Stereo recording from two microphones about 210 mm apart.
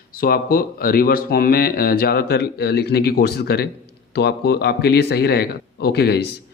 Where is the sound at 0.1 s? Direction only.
45° left (ahead or behind).